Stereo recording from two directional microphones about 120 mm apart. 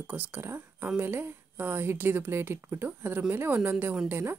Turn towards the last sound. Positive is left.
turn(degrees=-20)  # may be behind; listen again after turning